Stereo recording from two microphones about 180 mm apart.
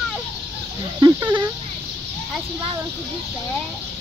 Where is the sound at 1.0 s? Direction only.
20° right (ahead or behind).